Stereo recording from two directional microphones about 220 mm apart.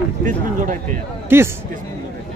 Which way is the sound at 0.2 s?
35° right (ahead or behind).